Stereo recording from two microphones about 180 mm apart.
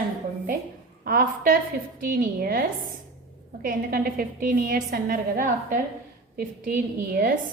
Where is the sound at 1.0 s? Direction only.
50° right (ahead or behind).